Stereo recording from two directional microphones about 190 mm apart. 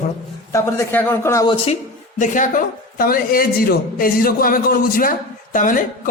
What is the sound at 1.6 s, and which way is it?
A woman's voice, 40° left (ahead or behind).